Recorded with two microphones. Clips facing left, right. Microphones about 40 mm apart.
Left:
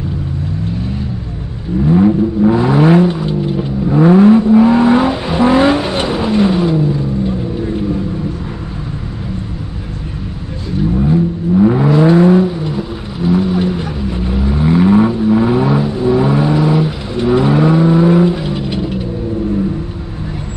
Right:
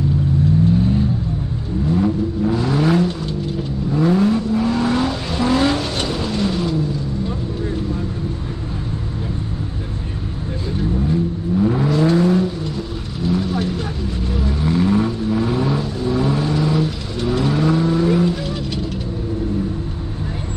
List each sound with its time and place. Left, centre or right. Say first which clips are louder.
1.9 s vehicle: left 8 dB; left
11.0 s vehicle: left 8 dB; left